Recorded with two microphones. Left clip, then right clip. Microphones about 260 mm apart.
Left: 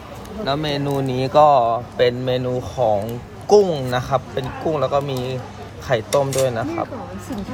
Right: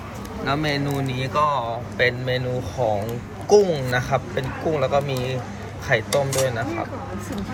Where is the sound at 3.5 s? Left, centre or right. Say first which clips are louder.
Left 2 dB; centre.